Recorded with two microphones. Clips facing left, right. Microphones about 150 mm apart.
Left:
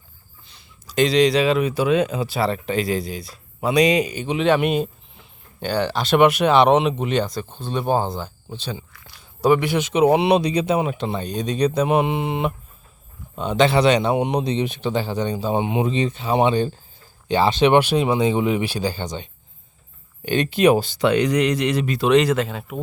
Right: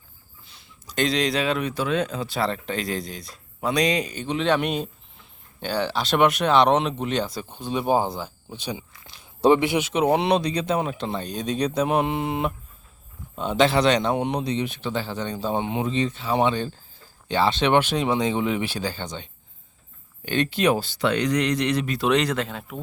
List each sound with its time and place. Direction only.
0.4 s speech: centre (ahead or behind)
7.3 s speech: 10° right (ahead or behind)
9.7 s a man's voice: centre (ahead or behind)